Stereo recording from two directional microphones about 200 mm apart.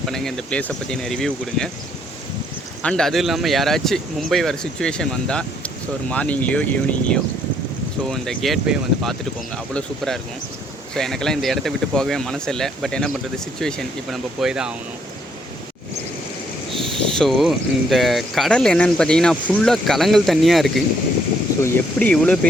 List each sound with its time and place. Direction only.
0.0 s speech: centre (ahead or behind)
2.8 s speech: 5° left (ahead or behind)
17.1 s speech: centre (ahead or behind)